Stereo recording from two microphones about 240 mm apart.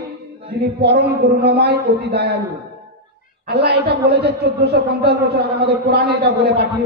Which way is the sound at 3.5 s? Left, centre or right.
Right.